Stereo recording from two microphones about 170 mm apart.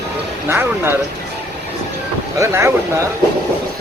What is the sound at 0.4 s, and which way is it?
Speech, 15° right (ahead or behind).